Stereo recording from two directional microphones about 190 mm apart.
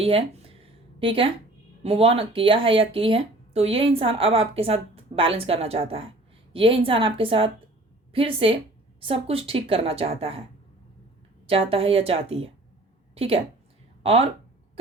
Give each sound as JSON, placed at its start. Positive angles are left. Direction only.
{"t": 0.0, "sound": "a sound", "side_deg": -30}
{"t": 1.8, "sound": "speech", "side_deg": -30}
{"t": 11.4, "sound": "a woman's voice", "side_deg": -30}